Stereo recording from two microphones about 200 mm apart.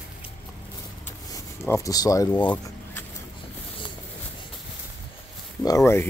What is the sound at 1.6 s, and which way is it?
Speech, 15° left (ahead or behind).